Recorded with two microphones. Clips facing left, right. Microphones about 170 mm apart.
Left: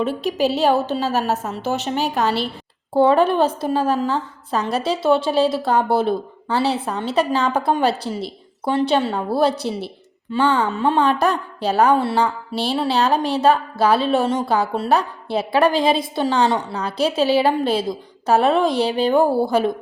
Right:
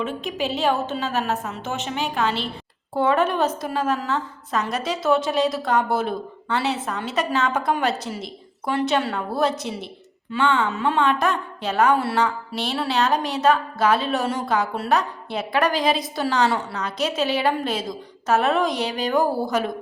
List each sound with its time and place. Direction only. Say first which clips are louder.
0.0 s a woman's voice: left 6 dB; 35° left (ahead or behind)